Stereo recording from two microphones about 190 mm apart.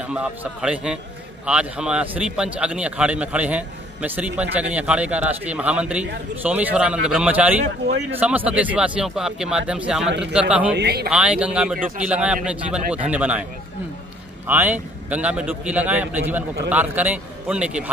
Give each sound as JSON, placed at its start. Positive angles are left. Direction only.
{"t": 0.0, "sound": "a man's voice", "side_deg": -5}
{"t": 10.7, "sound": "speech", "side_deg": -60}
{"t": 11.1, "sound": "a man's voice", "side_deg": -5}
{"t": 14.5, "sound": "a man's voice", "side_deg": -10}